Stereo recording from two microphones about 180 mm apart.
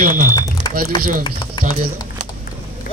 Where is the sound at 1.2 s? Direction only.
25° left (ahead or behind).